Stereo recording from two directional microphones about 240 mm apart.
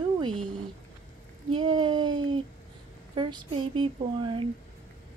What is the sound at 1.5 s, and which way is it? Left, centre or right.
Female singing, right.